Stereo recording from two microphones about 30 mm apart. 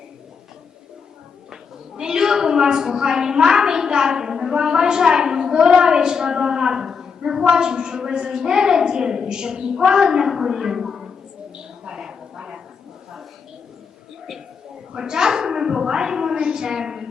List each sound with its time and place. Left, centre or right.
2.0 s a woman's voice: right
11.9 s a sound: right
14.9 s a woman's voice: right